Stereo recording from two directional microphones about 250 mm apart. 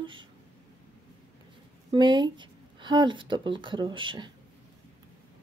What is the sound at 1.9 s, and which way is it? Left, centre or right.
Speech, centre.